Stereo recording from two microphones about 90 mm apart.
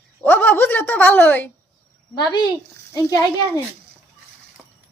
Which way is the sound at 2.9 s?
45° left (ahead or behind).